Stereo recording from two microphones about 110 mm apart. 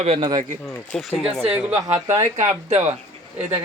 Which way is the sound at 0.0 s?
65° right (ahead or behind).